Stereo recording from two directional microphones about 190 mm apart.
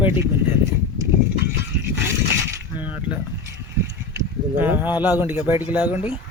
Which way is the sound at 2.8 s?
5° right (ahead or behind).